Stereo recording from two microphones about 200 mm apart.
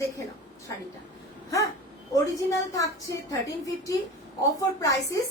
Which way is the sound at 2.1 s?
15° left (ahead or behind).